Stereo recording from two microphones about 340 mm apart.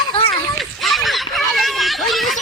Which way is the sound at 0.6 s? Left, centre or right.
Centre.